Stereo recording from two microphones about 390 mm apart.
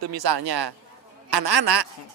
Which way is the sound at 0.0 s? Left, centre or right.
Right.